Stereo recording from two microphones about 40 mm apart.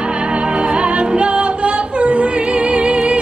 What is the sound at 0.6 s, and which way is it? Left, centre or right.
Music, right.